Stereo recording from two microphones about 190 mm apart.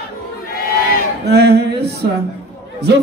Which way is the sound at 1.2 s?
60° right (ahead or behind).